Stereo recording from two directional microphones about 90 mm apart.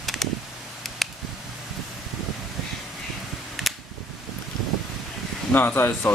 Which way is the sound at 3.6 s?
Centre (ahead or behind).